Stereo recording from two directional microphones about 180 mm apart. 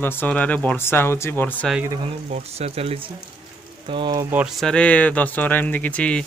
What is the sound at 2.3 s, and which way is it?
Speech, 35° right (ahead or behind).